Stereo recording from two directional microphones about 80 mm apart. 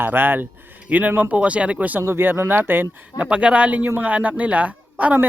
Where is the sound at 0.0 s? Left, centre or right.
Right.